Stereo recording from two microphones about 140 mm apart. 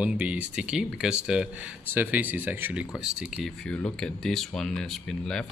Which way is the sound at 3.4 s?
5° left (ahead or behind).